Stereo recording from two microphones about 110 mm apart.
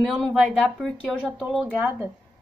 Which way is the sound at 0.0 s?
5° left (ahead or behind).